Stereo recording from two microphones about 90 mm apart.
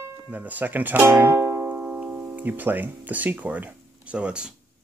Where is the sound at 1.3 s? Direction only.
35° right (ahead or behind).